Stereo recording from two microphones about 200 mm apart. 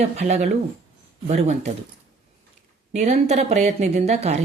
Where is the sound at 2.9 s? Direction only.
35° right (ahead or behind).